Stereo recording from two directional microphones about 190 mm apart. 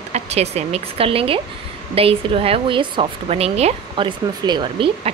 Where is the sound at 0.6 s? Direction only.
35° right (ahead or behind).